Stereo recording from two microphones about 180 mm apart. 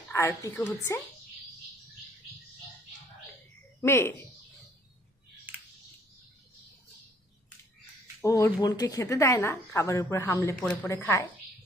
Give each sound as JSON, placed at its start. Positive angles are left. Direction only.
{"t": 0.1, "sound": "a woman's voice", "side_deg": 15}
{"t": 3.8, "sound": "speech", "side_deg": 15}
{"t": 8.2, "sound": "a woman's voice", "side_deg": 15}
{"t": 10.8, "sound": "a woman's voice", "side_deg": 15}